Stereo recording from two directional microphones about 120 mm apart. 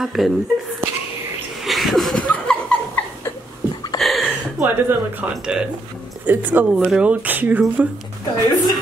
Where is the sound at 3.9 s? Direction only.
Centre (ahead or behind).